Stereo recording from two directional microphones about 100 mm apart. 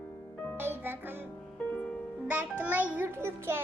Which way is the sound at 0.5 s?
20° right (ahead or behind).